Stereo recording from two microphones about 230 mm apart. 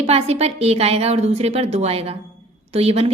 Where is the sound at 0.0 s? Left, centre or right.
Right.